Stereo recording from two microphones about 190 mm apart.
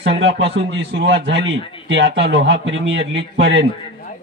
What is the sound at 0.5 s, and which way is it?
Speech, 60° right (ahead or behind).